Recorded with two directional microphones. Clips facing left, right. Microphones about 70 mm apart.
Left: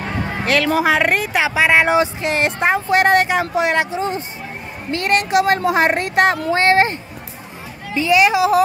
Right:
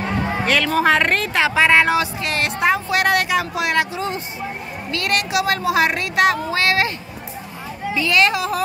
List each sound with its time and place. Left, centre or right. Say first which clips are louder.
0.4 s music: left 3 dB; centre
0.7 s a woman's voice: even; centre; by 7.0 s left
7.9 s a woman's voice: left 4 dB; left